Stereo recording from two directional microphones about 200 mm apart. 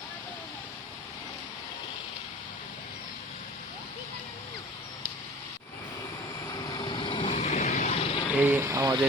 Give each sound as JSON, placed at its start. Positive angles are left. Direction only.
{"t": 6.5, "sound": "vehicle", "side_deg": 20}
{"t": 8.4, "sound": "speech", "side_deg": -10}